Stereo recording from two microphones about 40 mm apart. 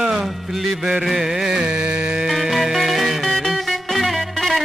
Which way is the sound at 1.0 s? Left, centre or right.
Centre.